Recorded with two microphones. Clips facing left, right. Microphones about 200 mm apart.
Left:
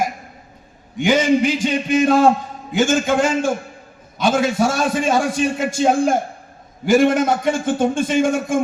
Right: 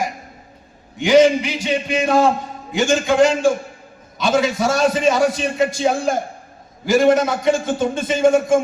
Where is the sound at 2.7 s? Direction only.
50° left (ahead or behind).